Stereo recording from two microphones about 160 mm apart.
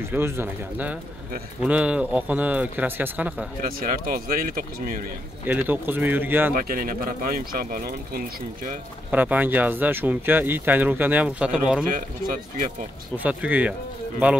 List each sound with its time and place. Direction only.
0.1 s speech: 10° right (ahead or behind)
4.1 s speech: 65° right (ahead or behind)
5.5 s speech: 10° right (ahead or behind)
6.5 s speech: 60° right (ahead or behind)
9.1 s speech: 10° right (ahead or behind)
13.2 s speech: 10° right (ahead or behind)